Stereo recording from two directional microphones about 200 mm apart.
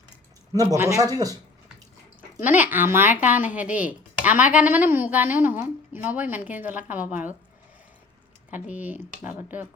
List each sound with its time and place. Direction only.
0.5 s a woman's voice: 15° right (ahead or behind)
8.4 s a woman's voice: 10° right (ahead or behind)